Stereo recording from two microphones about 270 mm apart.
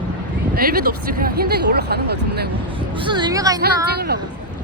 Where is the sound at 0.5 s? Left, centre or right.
Right.